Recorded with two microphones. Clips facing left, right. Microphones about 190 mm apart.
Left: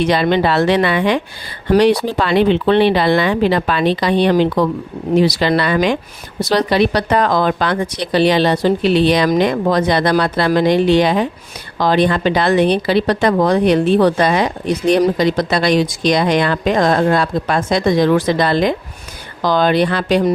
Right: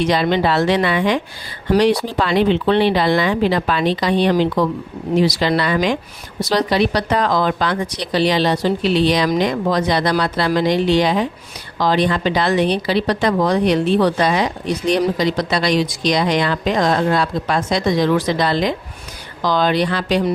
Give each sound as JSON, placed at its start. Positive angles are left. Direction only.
{"t": 0.0, "sound": "a woman's voice", "side_deg": 60}